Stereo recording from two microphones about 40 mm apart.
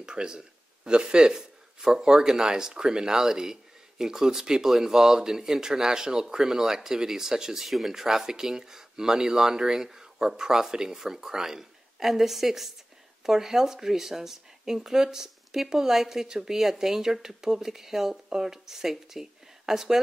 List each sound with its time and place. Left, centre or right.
0.0 s speech: centre